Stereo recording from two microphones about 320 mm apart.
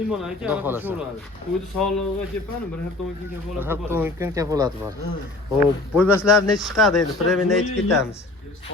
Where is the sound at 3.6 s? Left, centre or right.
Centre.